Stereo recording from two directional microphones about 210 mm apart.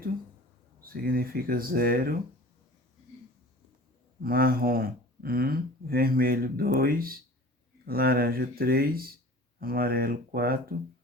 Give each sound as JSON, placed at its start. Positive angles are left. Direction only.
{"t": 0.8, "sound": "speech", "side_deg": -45}
{"t": 4.2, "sound": "speech", "side_deg": -45}